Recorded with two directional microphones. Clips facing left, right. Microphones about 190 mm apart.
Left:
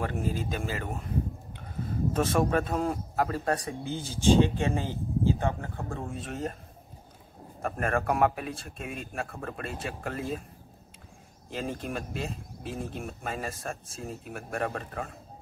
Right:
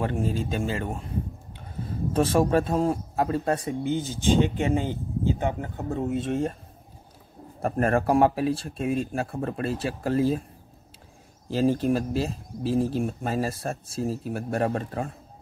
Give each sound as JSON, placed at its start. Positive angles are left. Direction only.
{"t": 0.0, "sound": "a man's voice", "side_deg": -30}
{"t": 2.1, "sound": "a man's voice", "side_deg": -30}
{"t": 7.6, "sound": "speech", "side_deg": -35}
{"t": 11.5, "sound": "speech", "side_deg": -35}